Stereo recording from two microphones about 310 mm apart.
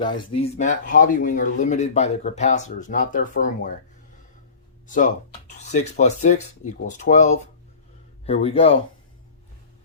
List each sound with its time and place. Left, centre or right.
0.0 s speech: centre
4.9 s speech: left